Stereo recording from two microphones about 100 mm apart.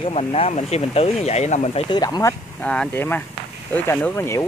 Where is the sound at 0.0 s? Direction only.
85° left.